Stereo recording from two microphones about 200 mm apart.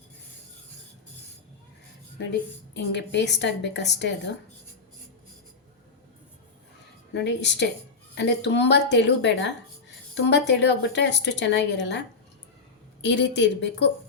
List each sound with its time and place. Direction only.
2.1 s a woman's voice: 60° left (ahead or behind)
7.1 s a woman's voice: 60° left (ahead or behind)